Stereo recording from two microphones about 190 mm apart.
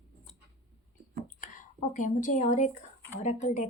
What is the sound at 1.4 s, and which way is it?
A woman's voice, 40° left (ahead or behind).